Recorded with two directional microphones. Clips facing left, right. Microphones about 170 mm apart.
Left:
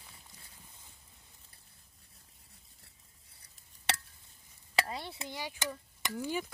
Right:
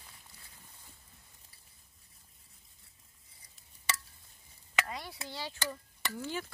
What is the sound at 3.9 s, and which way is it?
Chop, 65° left (ahead or behind).